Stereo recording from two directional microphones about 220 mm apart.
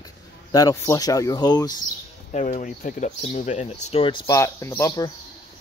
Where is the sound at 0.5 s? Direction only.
15° left (ahead or behind).